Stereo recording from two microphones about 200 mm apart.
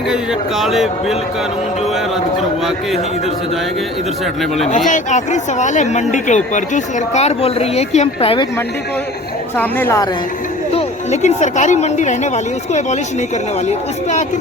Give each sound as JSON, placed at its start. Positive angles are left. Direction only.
{"t": 0.1, "sound": "speech", "side_deg": 0}
{"t": 4.9, "sound": "speech", "side_deg": 35}
{"t": 9.6, "sound": "a woman's voice", "side_deg": 10}
{"t": 10.8, "sound": "speech", "side_deg": 35}
{"t": 13.7, "sound": "speech", "side_deg": 35}